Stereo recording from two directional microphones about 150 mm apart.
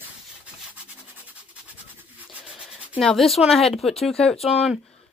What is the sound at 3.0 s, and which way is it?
Speech, 5° left (ahead or behind).